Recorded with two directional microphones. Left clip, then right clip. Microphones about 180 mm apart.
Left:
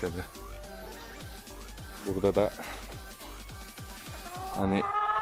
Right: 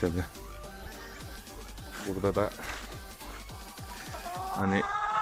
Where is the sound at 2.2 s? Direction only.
20° left (ahead or behind).